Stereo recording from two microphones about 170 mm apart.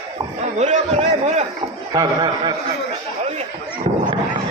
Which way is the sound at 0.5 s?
40° right (ahead or behind).